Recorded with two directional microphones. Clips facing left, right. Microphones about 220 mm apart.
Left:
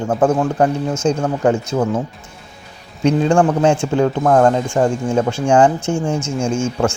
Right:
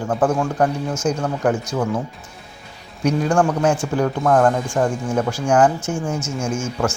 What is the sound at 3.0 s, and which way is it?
Speech, 25° left (ahead or behind).